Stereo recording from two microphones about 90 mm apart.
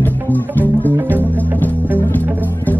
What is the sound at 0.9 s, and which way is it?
Music, 20° right (ahead or behind).